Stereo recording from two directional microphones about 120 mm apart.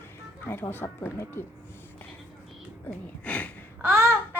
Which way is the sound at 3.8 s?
20° right (ahead or behind).